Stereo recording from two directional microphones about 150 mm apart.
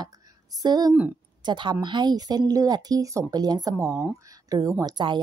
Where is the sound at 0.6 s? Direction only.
25° right (ahead or behind).